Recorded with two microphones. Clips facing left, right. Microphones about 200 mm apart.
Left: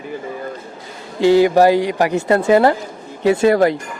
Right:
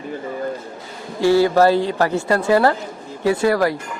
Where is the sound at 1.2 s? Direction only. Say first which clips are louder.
Left 3 dB; 15° left (ahead or behind).